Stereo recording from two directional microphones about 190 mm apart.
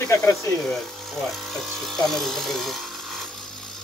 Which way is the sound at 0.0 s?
15° left (ahead or behind).